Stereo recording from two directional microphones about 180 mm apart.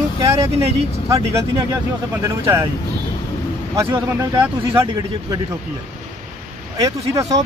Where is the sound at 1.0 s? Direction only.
15° right (ahead or behind).